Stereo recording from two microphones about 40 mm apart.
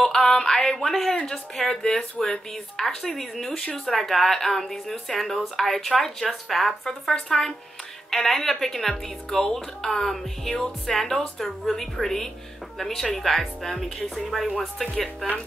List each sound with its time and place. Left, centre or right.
0.0 s a sound: centre
0.6 s speech: centre
6.8 s speech: centre